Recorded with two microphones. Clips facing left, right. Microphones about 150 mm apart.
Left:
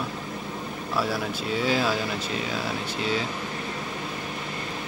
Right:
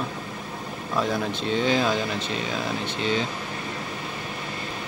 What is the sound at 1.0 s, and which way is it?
Speech, 5° left (ahead or behind).